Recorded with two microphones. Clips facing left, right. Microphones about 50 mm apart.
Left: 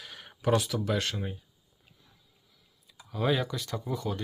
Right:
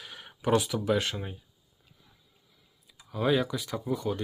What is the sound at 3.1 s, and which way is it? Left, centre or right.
Speech, centre.